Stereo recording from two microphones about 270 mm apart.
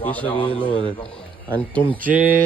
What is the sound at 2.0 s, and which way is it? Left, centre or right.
Speech, centre.